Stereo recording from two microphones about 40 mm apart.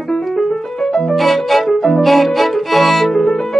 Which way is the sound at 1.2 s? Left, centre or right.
Centre.